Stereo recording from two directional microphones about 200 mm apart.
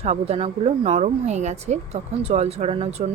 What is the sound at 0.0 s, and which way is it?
Speech, 30° right (ahead or behind).